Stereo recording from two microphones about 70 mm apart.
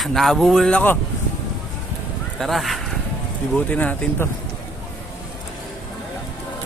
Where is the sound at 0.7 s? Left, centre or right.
Left.